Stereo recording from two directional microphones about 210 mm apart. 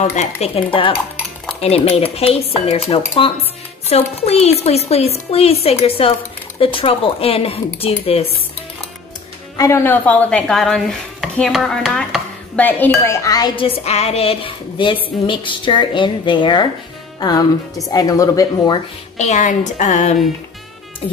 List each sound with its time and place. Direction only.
0.0 s dishes: 35° left (ahead or behind)
9.6 s speech: 15° left (ahead or behind)
19.1 s speech: 35° left (ahead or behind)